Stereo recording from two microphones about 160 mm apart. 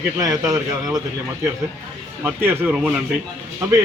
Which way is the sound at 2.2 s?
10° right (ahead or behind).